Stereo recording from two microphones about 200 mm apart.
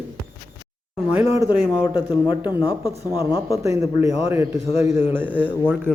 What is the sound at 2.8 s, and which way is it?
Speech, 20° left (ahead or behind).